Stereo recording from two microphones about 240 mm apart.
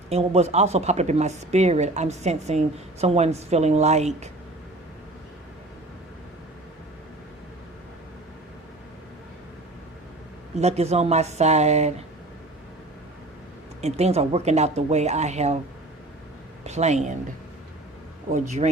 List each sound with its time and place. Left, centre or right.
0.1 s speech: right
10.6 s speech: right
13.8 s speech: right
16.6 s speech: right
18.3 s speech: right